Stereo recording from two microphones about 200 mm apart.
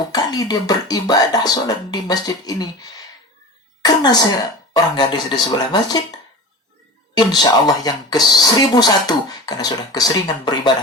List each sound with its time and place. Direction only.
0.1 s speech: 20° left (ahead or behind)
3.8 s speech: 20° left (ahead or behind)
7.3 s speech: 20° left (ahead or behind)